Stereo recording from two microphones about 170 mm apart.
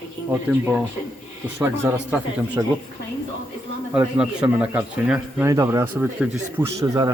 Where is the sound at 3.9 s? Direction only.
5° right (ahead or behind).